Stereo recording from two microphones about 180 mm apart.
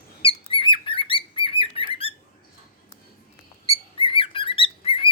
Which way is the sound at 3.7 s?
30° left (ahead or behind).